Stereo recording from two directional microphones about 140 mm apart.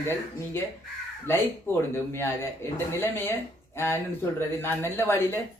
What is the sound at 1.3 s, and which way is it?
Speech, 15° left (ahead or behind).